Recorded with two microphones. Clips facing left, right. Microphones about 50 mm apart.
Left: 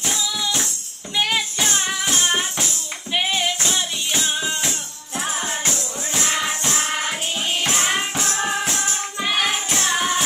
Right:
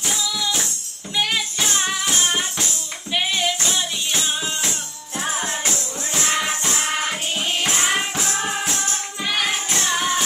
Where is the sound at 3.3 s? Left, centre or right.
Centre.